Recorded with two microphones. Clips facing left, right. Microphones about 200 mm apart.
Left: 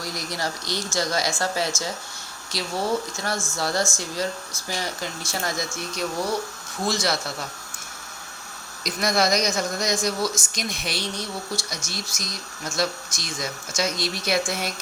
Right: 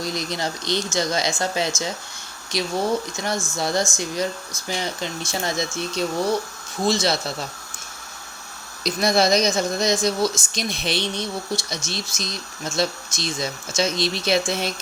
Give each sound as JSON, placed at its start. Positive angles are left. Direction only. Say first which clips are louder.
{"t": 0.0, "sound": "speech", "louder": "right 3 dB", "side_deg": -20}
{"t": 3.3, "sound": "speech", "louder": "right 3 dB", "side_deg": 0}
{"t": 3.6, "sound": "speech", "louder": "right 2 dB", "side_deg": -20}
{"t": 8.8, "sound": "speech", "louder": "right 4 dB", "side_deg": -30}